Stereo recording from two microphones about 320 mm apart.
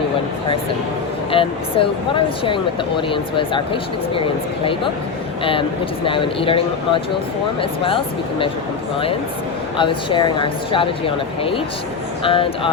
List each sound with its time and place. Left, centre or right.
1.3 s speech: centre
9.7 s speech: centre